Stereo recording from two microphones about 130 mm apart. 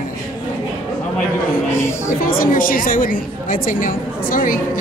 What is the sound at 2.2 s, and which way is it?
A woman's voice, 90° left.